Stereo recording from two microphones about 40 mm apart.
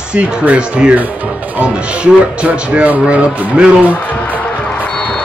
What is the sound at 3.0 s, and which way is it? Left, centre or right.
Speech, right.